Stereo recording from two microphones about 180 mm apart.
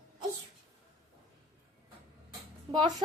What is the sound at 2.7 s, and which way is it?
Speech, 25° right (ahead or behind).